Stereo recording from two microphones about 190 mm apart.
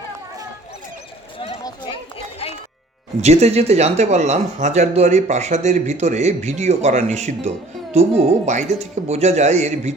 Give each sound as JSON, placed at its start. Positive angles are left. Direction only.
{"t": 1.6, "sound": "run", "side_deg": 25}
{"t": 3.2, "sound": "speech", "side_deg": -35}